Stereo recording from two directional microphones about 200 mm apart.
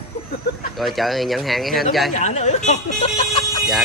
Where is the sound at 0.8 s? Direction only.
Centre (ahead or behind).